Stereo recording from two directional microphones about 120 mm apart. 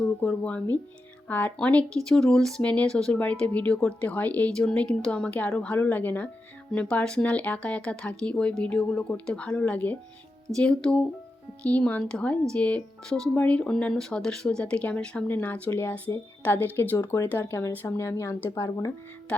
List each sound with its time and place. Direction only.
0.2 s speech: 10° left (ahead or behind); by 18.9 s 25° left (ahead or behind)